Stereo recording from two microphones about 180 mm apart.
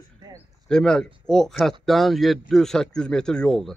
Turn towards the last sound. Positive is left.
turn(degrees=5)  # may be behind; listen again after turning